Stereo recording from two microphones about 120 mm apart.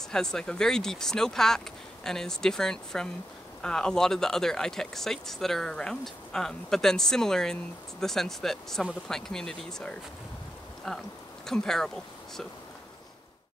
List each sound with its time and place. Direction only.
0.1 s speech: 5° left (ahead or behind)